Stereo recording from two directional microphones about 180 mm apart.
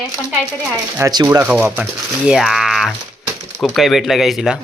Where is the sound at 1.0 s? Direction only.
25° right (ahead or behind).